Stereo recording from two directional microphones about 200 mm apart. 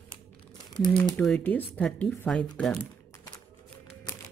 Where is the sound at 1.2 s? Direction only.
5° left (ahead or behind).